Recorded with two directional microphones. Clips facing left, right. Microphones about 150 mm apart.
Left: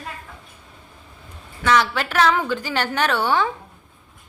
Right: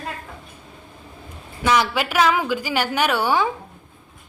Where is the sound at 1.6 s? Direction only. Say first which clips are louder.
Even; 15° right (ahead or behind).